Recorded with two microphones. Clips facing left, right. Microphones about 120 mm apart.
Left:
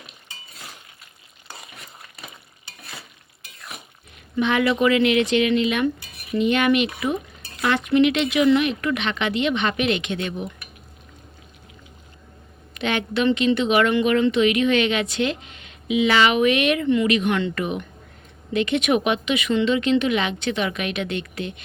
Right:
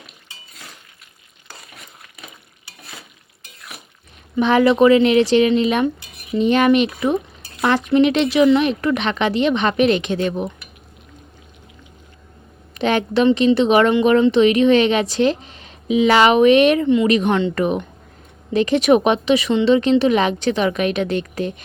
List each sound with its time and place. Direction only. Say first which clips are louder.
4.4 s speech: right 6 dB; 35° right (ahead or behind)
12.7 s a woman's voice: right 6 dB; 35° right (ahead or behind)
16.8 s speech: right 4 dB; 20° right (ahead or behind)
17.1 s speech: right 4 dB; 35° right (ahead or behind)